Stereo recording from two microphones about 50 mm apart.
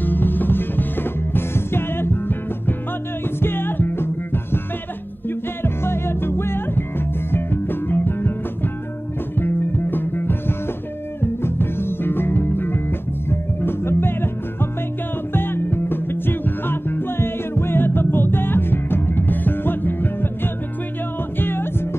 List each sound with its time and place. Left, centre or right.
0.0 s music: left
3.3 s music: left
5.6 s music: left
9.4 s music: left
11.4 s music: left
21.4 s music: left